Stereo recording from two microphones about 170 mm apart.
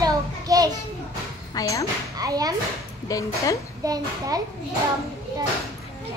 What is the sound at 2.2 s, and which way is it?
Speech, 20° right (ahead or behind).